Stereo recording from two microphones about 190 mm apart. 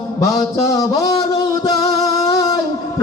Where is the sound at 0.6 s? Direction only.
20° left (ahead or behind).